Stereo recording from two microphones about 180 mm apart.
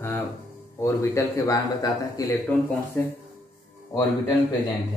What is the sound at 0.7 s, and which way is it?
A man's voice, 15° left (ahead or behind).